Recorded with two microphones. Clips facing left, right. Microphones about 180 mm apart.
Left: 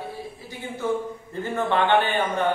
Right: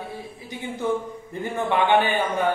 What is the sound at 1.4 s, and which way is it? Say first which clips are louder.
Speech: even; 15° right (ahead or behind).